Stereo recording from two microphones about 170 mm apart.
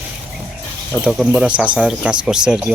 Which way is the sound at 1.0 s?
5° right (ahead or behind).